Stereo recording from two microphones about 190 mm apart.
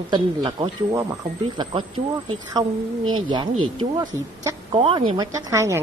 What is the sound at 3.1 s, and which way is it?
Speech, 25° right (ahead or behind).